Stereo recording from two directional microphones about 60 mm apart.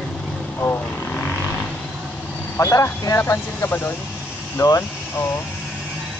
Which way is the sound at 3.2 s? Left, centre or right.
Left.